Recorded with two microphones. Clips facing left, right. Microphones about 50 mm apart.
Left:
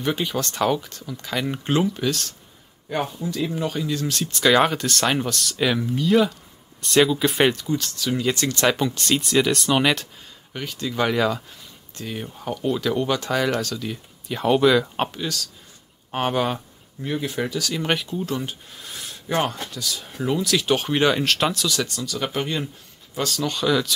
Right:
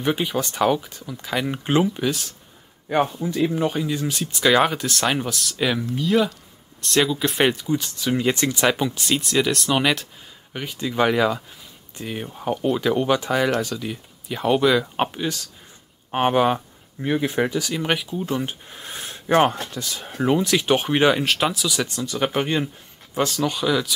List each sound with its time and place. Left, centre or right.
0.0 s speech: centre
3.1 s speech: right; by 7.5 s centre
7.5 s speech: centre
10.5 s speech: centre
14.2 s speech: centre
17.8 s speech: centre
18.2 s speech: right
23.4 s speech: centre